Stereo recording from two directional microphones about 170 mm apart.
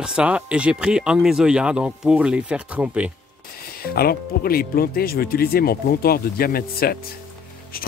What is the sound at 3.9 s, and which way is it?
Speech, 60° left (ahead or behind).